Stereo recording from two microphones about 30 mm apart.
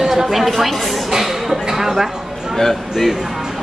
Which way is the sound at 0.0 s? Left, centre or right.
Centre.